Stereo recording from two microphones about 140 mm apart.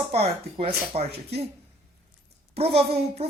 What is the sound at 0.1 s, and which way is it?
A woman's voice, 45° right (ahead or behind).